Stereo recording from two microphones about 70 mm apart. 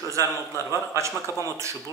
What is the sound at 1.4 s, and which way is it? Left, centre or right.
Speech, right.